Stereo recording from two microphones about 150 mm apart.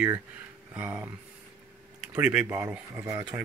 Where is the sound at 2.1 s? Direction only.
10° right (ahead or behind).